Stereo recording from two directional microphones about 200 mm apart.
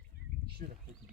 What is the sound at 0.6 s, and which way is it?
Speech, 40° right (ahead or behind).